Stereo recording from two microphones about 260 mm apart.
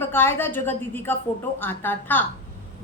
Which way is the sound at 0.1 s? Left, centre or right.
Centre.